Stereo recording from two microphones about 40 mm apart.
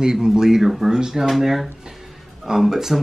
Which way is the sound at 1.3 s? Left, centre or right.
Centre.